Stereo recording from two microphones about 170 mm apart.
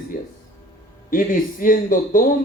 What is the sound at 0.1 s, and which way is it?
A man's voice, 60° left (ahead or behind).